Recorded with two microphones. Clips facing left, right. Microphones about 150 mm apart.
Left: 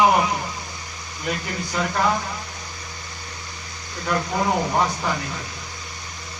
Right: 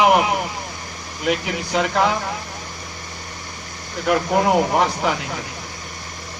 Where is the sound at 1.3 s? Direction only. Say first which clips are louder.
Right 6 dB; 75° right (ahead or behind).